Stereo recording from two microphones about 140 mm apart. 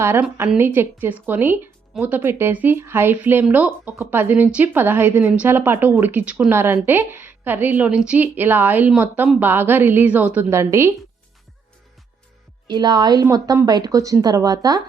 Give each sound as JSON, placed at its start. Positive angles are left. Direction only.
{"t": 0.0, "sound": "speech", "side_deg": -15}
{"t": 12.6, "sound": "a woman's voice", "side_deg": -30}